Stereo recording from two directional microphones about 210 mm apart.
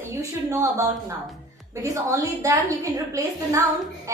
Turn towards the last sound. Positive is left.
turn(degrees=-15)  # may be behind; listen again after turning